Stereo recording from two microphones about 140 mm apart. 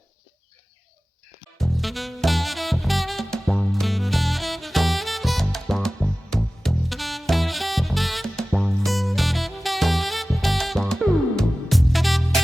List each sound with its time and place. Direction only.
1.5 s music: centre (ahead or behind)